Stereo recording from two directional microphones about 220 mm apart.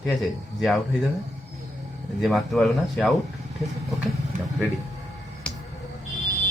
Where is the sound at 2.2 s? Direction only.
Centre (ahead or behind).